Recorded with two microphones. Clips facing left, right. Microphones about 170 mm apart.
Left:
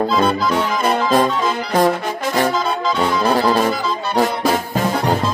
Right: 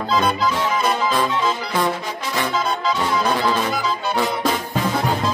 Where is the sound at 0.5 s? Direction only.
60° left (ahead or behind).